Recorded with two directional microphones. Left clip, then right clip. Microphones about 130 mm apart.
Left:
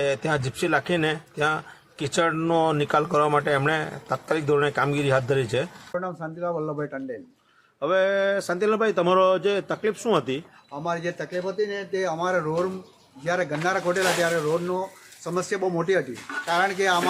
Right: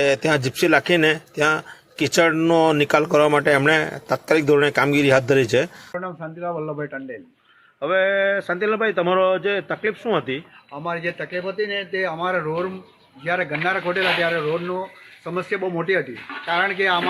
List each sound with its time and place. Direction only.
0.0 s a man's voice: 20° right (ahead or behind)
6.1 s speech: 10° left (ahead or behind)
14.7 s speech: 20° left (ahead or behind)